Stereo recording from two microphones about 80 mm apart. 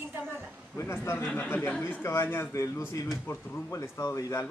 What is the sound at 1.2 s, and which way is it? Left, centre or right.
A man's voice, left.